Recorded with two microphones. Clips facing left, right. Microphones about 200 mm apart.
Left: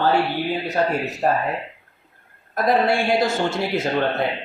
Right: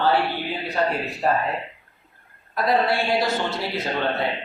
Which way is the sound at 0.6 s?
45° left (ahead or behind).